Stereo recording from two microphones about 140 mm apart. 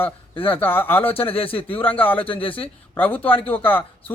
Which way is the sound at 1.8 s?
10° left (ahead or behind).